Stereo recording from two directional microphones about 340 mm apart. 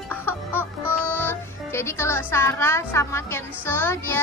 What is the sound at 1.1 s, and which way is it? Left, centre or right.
Speech, centre.